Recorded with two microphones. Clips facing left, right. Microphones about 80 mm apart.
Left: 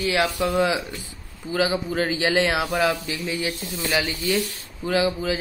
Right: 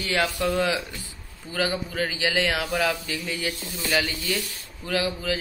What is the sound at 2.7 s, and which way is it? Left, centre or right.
Speech, centre.